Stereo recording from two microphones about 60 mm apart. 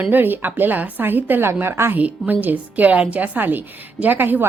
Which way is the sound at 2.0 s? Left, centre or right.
Right.